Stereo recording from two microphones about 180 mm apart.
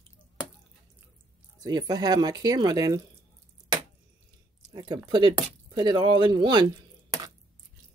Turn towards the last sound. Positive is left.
turn(degrees=-25)  # may be behind; listen again after turning